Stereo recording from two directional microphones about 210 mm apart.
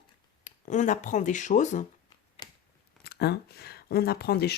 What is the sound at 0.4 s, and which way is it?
Speech, 35° left (ahead or behind).